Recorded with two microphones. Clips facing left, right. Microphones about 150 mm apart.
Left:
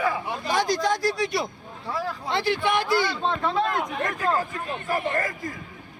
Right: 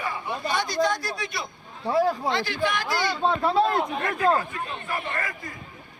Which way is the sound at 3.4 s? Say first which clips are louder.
Right 3 dB; 35° right (ahead or behind).